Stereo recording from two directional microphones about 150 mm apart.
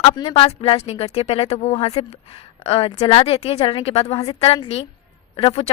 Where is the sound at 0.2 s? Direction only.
40° left (ahead or behind).